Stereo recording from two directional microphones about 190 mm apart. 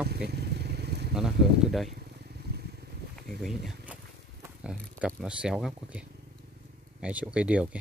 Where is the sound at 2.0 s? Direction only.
60° right (ahead or behind).